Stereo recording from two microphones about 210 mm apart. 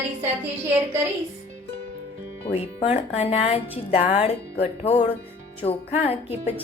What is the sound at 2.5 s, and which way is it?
A woman's voice, 30° left (ahead or behind).